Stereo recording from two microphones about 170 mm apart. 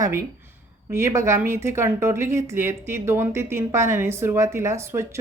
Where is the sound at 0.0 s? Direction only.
15° right (ahead or behind).